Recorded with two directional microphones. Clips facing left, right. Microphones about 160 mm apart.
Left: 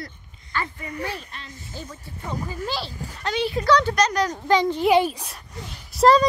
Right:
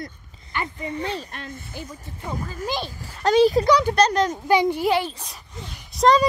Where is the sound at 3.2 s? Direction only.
40° right (ahead or behind).